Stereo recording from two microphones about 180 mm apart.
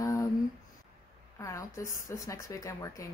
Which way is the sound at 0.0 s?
15° left (ahead or behind).